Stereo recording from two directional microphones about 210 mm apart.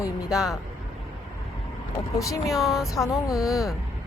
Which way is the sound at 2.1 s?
15° left (ahead or behind).